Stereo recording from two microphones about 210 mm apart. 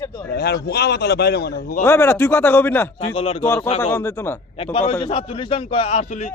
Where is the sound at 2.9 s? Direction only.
30° left (ahead or behind).